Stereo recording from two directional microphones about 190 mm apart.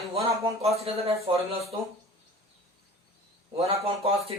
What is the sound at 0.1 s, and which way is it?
Speech, 35° right (ahead or behind).